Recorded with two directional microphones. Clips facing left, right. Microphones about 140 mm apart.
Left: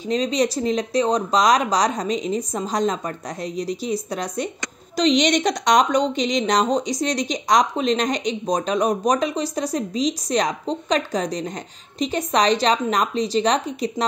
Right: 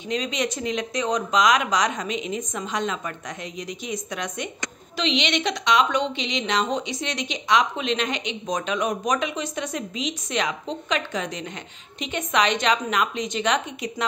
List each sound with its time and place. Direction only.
0.1 s a woman's voice: 35° left (ahead or behind)